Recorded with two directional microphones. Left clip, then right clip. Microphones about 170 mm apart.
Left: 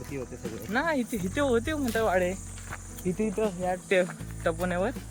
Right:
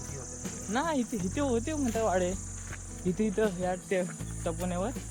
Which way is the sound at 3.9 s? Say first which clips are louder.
Left 6 dB; 15° left (ahead or behind).